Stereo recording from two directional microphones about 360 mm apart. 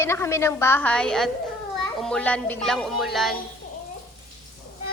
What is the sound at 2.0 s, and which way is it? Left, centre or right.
Music, centre.